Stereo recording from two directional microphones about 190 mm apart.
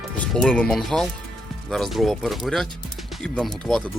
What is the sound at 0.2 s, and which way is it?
Speech, 5° left (ahead or behind).